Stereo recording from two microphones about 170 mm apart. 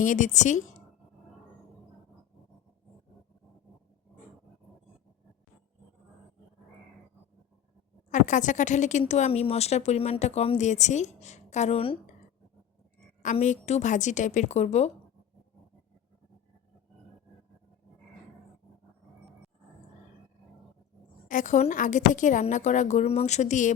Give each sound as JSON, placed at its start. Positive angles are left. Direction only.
{"t": 0.0, "sound": "speech", "side_deg": 50}
{"t": 8.1, "sound": "speech", "side_deg": 45}
{"t": 13.3, "sound": "speech", "side_deg": 40}
{"t": 21.2, "sound": "speech", "side_deg": 50}